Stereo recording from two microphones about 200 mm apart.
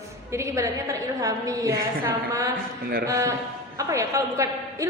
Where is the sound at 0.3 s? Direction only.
15° right (ahead or behind).